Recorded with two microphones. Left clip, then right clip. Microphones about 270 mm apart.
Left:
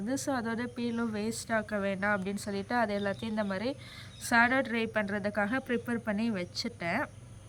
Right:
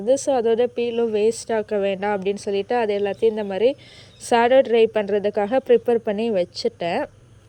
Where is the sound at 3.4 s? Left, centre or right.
Centre.